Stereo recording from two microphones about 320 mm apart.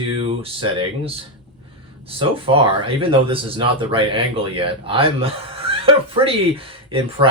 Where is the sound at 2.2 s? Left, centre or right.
Centre.